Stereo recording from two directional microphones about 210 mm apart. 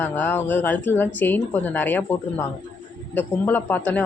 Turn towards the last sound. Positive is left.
turn(degrees=10)  # may be behind; listen again after turning